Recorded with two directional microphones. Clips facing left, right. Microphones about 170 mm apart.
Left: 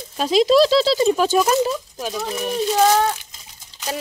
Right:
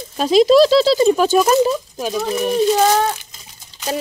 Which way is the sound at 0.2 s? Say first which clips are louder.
Right 4 dB; 45° right (ahead or behind).